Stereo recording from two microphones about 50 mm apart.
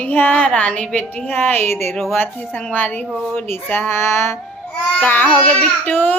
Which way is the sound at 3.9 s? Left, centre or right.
Left.